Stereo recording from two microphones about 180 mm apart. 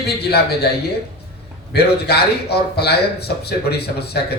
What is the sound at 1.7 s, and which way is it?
A man's voice, 65° left (ahead or behind).